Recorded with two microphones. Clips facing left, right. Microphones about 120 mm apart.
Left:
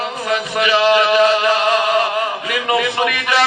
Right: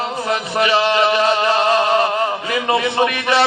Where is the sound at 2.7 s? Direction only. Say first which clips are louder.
Even; 30° right (ahead or behind).